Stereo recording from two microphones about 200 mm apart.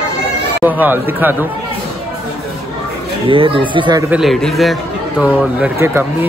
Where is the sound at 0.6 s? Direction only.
10° right (ahead or behind).